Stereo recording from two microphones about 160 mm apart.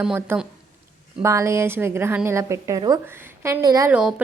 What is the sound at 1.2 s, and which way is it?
A woman's voice, 20° right (ahead or behind).